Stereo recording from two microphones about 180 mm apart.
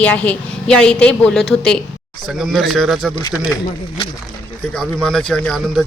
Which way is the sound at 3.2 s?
25° left (ahead or behind).